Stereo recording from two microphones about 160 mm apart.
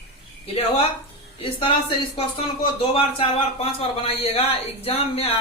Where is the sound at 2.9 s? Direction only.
35° left (ahead or behind).